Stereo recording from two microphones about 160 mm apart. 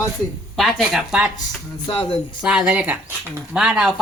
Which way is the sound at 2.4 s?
5° right (ahead or behind).